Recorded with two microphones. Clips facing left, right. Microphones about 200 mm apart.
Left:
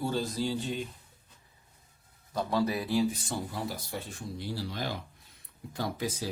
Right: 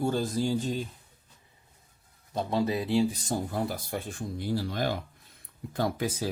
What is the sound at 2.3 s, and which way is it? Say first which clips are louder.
Speech: right 1 dB; 20° right (ahead or behind).